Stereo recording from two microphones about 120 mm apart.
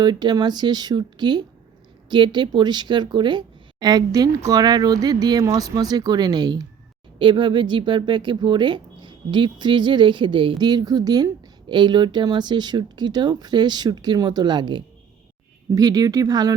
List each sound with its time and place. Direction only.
0.0 s speech: 35° right (ahead or behind)